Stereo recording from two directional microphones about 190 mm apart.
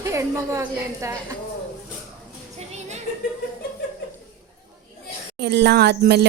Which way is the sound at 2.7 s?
35° right (ahead or behind).